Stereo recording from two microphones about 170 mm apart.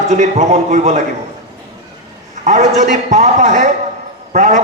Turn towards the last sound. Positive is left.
turn(degrees=-45)  # may be behind; listen again after turning